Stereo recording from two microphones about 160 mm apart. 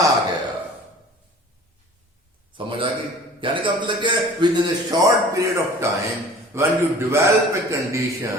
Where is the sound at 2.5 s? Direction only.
30° right (ahead or behind).